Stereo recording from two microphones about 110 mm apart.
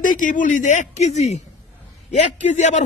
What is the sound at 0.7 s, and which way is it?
A man's voice, 90° left.